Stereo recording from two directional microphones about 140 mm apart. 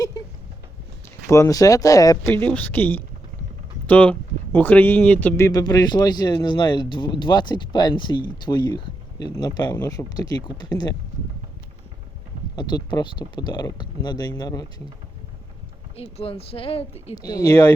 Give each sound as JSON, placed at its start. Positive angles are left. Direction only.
{"t": 1.3, "sound": "speech", "side_deg": 25}
{"t": 5.5, "sound": "speech", "side_deg": 30}
{"t": 9.7, "sound": "speech", "side_deg": 15}
{"t": 10.2, "sound": "speech", "side_deg": 30}
{"t": 12.5, "sound": "speech", "side_deg": 30}
{"t": 16.0, "sound": "speech", "side_deg": 45}
{"t": 17.2, "sound": "speech", "side_deg": 25}